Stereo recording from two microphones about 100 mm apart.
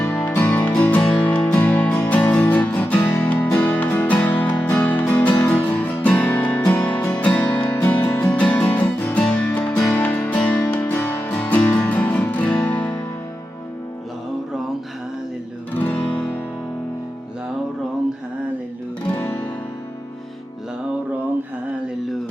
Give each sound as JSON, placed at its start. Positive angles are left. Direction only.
{"t": 0.1, "sound": "music", "side_deg": 15}
{"t": 15.7, "sound": "guitar", "side_deg": 20}
{"t": 19.0, "sound": "guitar", "side_deg": 20}